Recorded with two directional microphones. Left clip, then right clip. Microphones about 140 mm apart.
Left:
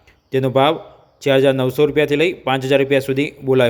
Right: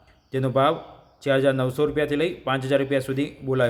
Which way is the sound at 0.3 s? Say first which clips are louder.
Left 6 dB; 20° left (ahead or behind).